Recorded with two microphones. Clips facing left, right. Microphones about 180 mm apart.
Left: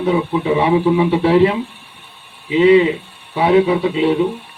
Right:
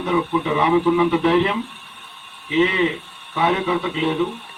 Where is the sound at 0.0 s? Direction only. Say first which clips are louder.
Left 4 dB; 30° left (ahead or behind).